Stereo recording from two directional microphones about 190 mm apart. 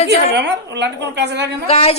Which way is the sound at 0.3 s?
65° right (ahead or behind).